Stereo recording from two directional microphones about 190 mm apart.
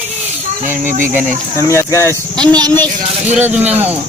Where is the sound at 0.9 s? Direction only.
45° right (ahead or behind).